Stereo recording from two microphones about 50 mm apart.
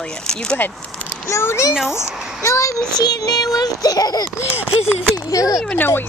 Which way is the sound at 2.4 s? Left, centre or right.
Left.